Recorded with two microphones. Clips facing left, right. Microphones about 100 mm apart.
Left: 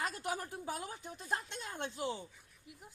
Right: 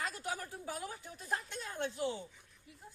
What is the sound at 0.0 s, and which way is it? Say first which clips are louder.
A woman's voice: left 2 dB; 20° left (ahead or behind).